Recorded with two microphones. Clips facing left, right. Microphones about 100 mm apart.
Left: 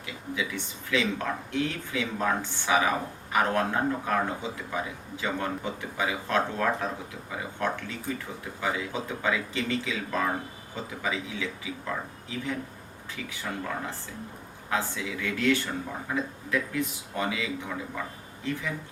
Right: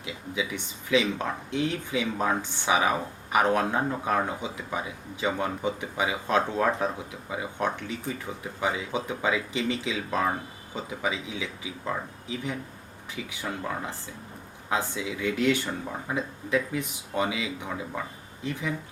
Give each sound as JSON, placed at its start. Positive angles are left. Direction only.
{"t": 0.0, "sound": "speech", "side_deg": -20}